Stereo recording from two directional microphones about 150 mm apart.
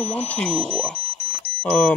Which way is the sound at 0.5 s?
40° right (ahead or behind).